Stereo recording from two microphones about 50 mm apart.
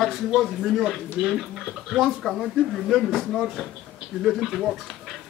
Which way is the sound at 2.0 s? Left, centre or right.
Centre.